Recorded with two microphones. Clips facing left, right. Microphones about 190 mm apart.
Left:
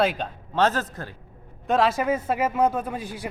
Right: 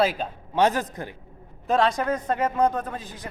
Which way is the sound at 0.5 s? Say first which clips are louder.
Right 1 dB; 15° right (ahead or behind).